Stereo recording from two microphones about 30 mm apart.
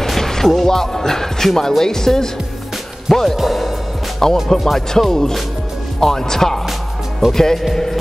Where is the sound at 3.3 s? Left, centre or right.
Centre.